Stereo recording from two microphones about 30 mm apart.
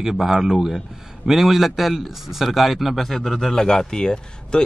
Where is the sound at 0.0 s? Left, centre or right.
Centre.